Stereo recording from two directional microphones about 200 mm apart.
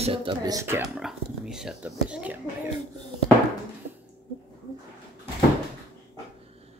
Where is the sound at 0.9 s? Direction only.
5° right (ahead or behind).